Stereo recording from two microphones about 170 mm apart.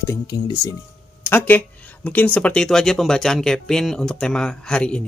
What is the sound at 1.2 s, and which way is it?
Speech, 10° left (ahead or behind).